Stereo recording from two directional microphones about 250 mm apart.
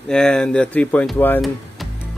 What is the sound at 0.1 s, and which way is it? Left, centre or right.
Speech, centre.